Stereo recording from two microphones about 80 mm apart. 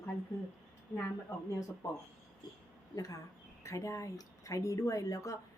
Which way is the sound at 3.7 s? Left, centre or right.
Left.